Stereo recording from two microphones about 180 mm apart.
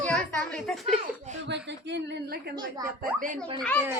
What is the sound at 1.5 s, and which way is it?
A woman's voice, 75° right (ahead or behind).